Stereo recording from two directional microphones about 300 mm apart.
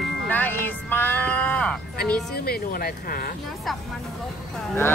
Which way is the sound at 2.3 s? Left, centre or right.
Left.